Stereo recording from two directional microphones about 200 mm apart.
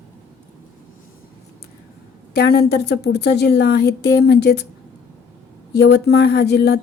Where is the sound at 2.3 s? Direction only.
50° left (ahead or behind).